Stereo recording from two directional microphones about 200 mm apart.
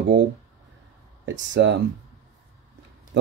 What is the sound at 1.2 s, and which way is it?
Speech, 60° right (ahead or behind).